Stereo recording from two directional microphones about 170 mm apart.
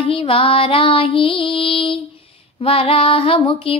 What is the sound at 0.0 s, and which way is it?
Female singing, 35° left (ahead or behind).